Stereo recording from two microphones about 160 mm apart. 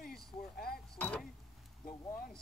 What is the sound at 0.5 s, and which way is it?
Speech, 70° left (ahead or behind).